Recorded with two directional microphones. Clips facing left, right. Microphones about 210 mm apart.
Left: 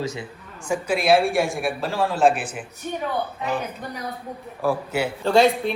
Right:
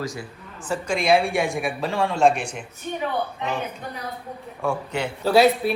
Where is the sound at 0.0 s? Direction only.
25° left (ahead or behind).